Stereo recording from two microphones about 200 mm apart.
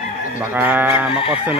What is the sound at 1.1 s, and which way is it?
Speech, 25° left (ahead or behind).